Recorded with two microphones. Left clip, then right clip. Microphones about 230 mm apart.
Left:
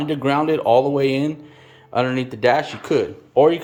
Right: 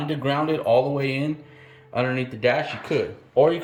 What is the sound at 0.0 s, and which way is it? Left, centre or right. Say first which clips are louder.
Speech: left 5 dB; centre.